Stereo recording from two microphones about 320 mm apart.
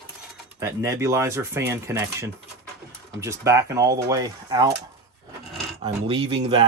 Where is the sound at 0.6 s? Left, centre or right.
Centre.